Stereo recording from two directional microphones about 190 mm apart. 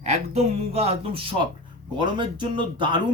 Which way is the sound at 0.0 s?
35° right (ahead or behind).